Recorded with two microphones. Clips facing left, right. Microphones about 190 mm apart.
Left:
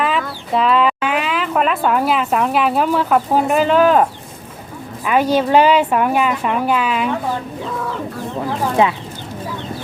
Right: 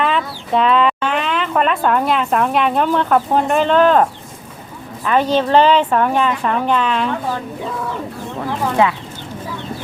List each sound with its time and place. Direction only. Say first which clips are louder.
0.0 s speech: right 1 dB; 5° left (ahead or behind)
5.0 s a woman's voice: even; 10° left (ahead or behind)
8.8 s speech: even; 20° left (ahead or behind)